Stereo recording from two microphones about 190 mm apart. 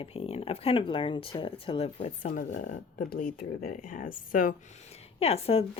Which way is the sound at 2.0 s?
45° left (ahead or behind).